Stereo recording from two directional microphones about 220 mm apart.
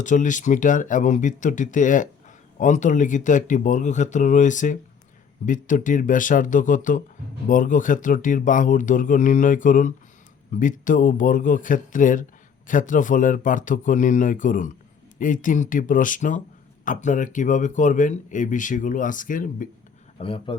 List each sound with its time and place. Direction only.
0.0 s speech: 35° left (ahead or behind)
20.1 s speech: 25° left (ahead or behind)